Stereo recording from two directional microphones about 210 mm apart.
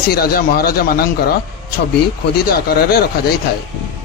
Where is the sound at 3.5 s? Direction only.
50° left (ahead or behind).